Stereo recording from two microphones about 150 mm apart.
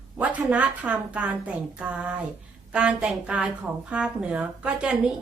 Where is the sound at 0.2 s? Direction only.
10° right (ahead or behind).